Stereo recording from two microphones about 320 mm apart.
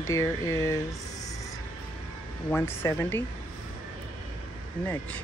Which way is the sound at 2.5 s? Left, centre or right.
Centre.